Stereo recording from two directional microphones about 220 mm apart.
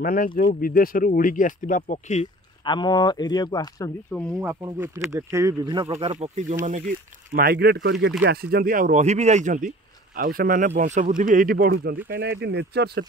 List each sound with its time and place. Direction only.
0.0 s speech: 40° left (ahead or behind)
2.6 s speech: 20° left (ahead or behind)
4.1 s speech: 5° left (ahead or behind)
4.6 s speech: 10° right (ahead or behind); by 6.8 s 35° right (ahead or behind)
7.3 s speech: 45° right (ahead or behind)